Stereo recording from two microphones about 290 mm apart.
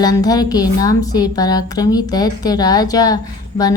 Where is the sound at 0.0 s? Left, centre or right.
Centre.